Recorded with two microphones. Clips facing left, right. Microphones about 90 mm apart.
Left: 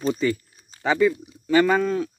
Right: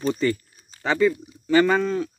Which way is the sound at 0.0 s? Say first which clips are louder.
Even; 5° left (ahead or behind).